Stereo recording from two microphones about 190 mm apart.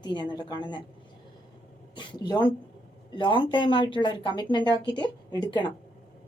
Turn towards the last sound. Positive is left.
turn(degrees=25)  # may be behind; listen again after turning